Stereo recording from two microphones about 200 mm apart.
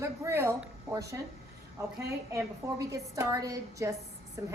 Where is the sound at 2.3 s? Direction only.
15° right (ahead or behind).